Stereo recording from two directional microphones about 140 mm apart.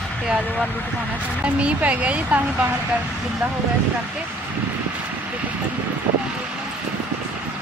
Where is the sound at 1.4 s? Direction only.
10° right (ahead or behind).